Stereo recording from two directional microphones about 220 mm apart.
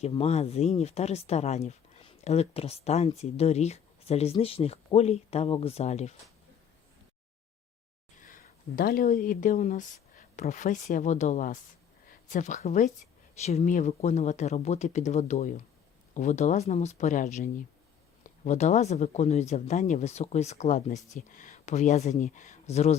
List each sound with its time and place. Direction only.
0.0 s speech: 30° left (ahead or behind)
8.2 s speech: 40° left (ahead or behind)